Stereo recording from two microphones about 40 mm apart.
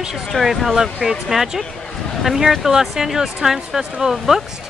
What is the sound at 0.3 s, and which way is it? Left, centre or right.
Speech, centre.